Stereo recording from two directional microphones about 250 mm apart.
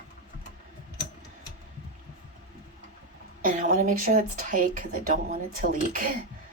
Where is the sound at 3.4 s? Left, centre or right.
Right.